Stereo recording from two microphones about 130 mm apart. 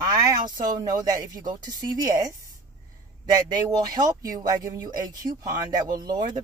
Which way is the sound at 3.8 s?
30° right (ahead or behind).